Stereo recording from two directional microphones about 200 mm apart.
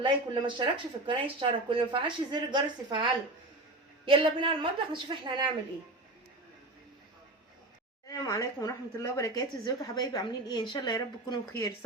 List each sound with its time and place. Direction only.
0.0 s speech: 25° right (ahead or behind)
8.0 s speech: 15° left (ahead or behind)